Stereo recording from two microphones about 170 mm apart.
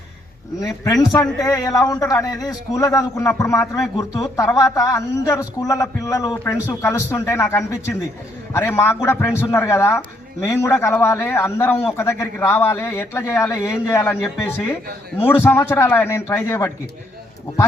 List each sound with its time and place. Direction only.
1.1 s a man's voice: 20° left (ahead or behind)